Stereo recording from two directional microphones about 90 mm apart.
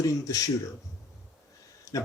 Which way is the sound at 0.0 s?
40° left (ahead or behind).